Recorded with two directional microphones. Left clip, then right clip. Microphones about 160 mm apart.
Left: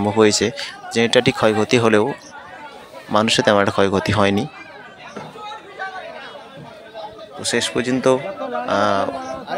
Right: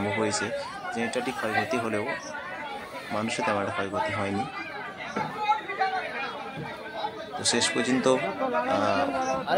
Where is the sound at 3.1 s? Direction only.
60° left (ahead or behind).